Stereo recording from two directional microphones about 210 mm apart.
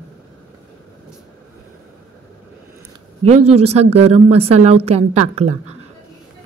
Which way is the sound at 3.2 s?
30° right (ahead or behind).